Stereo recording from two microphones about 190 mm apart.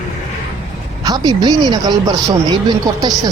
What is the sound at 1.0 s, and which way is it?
Speech, 20° right (ahead or behind).